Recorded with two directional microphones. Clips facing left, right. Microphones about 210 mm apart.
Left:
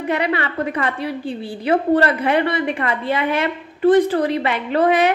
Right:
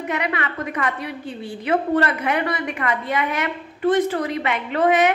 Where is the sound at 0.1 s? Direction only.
30° left (ahead or behind).